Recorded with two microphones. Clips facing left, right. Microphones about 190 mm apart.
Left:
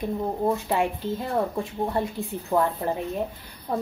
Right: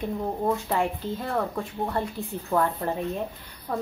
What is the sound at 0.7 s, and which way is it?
Speech, 15° left (ahead or behind).